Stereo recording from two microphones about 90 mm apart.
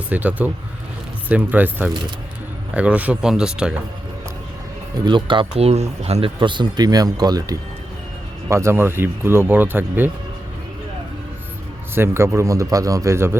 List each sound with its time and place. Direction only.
0.1 s speech: 20° right (ahead or behind)
5.0 s speech: 60° right (ahead or behind); by 7.6 s 45° right (ahead or behind)
8.4 s speech: 30° right (ahead or behind)
11.9 s a man's voice: 30° right (ahead or behind)